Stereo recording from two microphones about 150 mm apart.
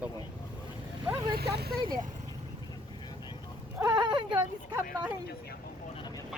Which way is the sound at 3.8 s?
30° right (ahead or behind).